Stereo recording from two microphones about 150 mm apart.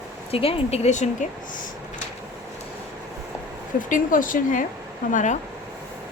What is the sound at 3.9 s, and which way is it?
A woman's voice, 65° left (ahead or behind).